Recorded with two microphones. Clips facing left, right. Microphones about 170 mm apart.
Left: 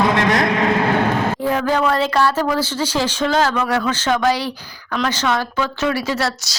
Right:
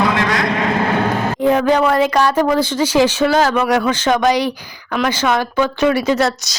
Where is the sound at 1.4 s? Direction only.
20° right (ahead or behind).